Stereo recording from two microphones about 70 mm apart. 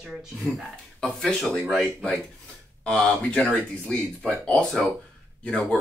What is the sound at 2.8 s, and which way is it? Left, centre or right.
Speech, centre.